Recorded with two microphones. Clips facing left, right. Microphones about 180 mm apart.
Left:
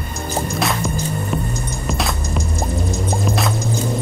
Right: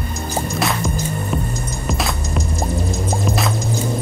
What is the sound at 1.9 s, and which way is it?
Music, centre (ahead or behind).